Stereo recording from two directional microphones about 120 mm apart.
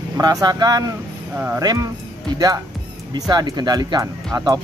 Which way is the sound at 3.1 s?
30° right (ahead or behind).